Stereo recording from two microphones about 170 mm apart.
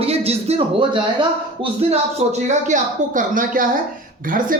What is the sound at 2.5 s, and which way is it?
Speech, 45° right (ahead or behind).